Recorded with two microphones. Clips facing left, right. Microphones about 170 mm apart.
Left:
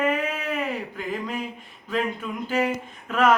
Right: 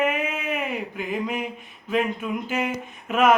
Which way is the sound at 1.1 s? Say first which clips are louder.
Right 2 dB; 15° right (ahead or behind).